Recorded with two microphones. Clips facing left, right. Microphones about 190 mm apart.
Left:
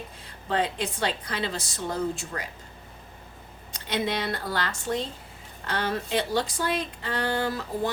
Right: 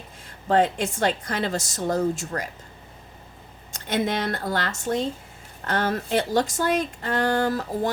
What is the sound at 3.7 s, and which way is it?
A woman's voice, 45° right (ahead or behind).